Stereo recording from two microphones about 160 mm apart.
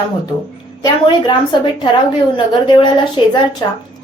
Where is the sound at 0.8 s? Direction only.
30° left (ahead or behind).